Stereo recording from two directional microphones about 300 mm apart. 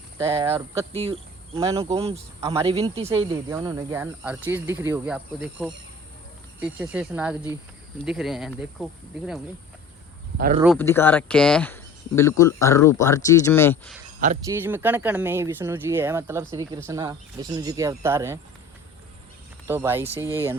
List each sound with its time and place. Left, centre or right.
0.2 s speech: centre
10.3 s speech: right
10.6 s speech: centre
14.4 s speech: centre
19.6 s speech: centre